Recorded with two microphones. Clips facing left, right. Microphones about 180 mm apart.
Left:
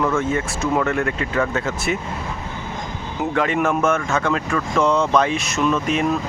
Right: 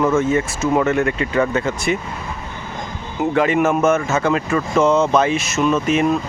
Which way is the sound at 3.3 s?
5° right (ahead or behind).